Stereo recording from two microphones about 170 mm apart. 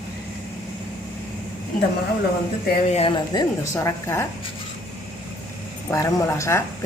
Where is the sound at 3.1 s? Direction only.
25° left (ahead or behind).